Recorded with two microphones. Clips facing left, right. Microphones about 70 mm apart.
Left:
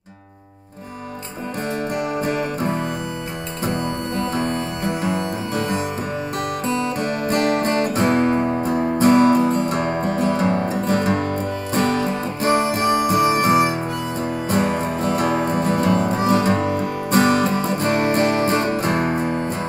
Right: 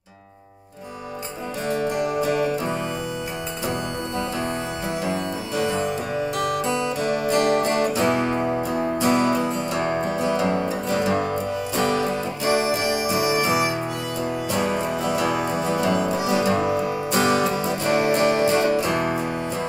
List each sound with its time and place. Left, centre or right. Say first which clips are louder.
2.0 s music: left 1 dB; left
4.2 s music: left 4 dB; left